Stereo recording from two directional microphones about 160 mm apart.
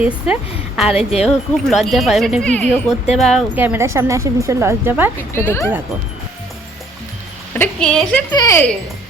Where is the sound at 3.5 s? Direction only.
10° right (ahead or behind).